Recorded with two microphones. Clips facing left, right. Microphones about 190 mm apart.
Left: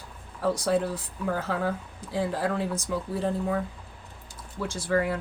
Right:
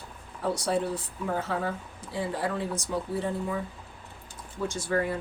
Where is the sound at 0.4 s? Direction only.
90° left.